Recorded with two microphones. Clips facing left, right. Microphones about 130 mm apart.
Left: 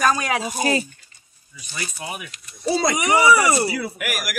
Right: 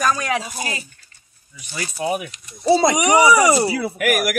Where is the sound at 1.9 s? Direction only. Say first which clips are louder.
Right 10 dB; 40° right (ahead or behind).